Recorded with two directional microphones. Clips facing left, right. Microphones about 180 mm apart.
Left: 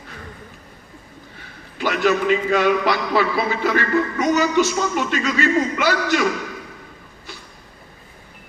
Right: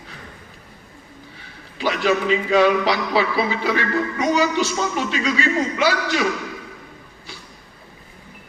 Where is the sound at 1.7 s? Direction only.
50° left (ahead or behind).